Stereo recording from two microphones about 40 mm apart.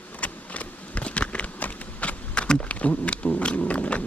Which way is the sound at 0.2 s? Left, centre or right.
Left.